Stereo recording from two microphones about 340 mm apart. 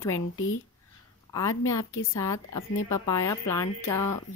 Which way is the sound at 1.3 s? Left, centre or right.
Centre.